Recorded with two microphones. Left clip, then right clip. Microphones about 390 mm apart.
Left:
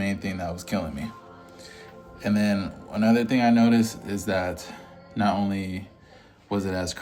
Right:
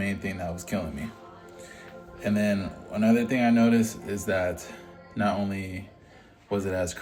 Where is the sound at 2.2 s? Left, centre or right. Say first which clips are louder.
Left 1 dB; centre.